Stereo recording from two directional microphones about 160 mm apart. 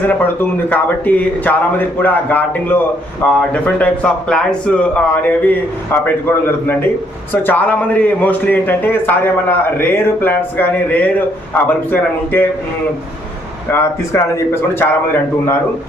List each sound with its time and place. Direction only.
0.1 s a man's voice: 10° left (ahead or behind)
7.4 s a man's voice: 10° left (ahead or behind)
13.7 s a man's voice: 15° left (ahead or behind)